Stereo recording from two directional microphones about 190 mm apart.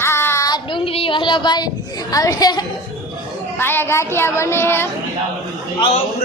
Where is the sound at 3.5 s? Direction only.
10° left (ahead or behind).